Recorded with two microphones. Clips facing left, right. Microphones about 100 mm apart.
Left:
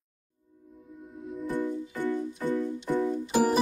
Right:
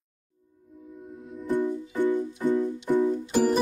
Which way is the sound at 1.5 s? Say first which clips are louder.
Right 6 dB; 15° right (ahead or behind).